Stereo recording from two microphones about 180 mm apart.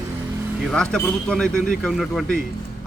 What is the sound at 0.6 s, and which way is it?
Speech, 5° left (ahead or behind).